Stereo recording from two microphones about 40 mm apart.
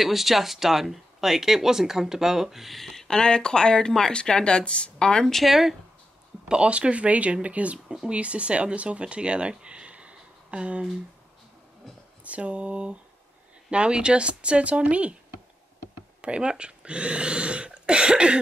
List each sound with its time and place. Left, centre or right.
0.0 s speech: centre
3.1 s speech: centre
5.2 s speech: centre
5.5 s speech: centre
6.5 s speech: right
9.0 s a sound: right
12.3 s speech: right
16.2 s speech: right